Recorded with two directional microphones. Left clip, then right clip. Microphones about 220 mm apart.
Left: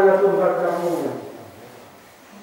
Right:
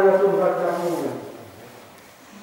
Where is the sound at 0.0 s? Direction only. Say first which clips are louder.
Left 1 dB; 15° right (ahead or behind).